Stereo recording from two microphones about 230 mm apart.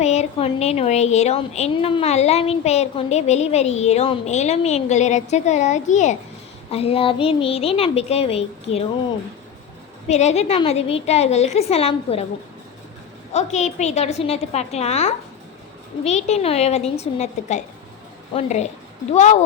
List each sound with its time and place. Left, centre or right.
0.0 s a woman's voice: left
10.1 s a woman's voice: left
13.3 s a woman's voice: left